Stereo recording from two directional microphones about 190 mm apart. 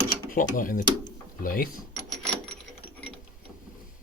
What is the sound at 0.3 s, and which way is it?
Speech, 45° left (ahead or behind).